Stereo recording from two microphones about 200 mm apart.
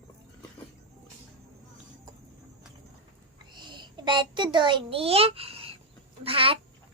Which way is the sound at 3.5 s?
20° right (ahead or behind).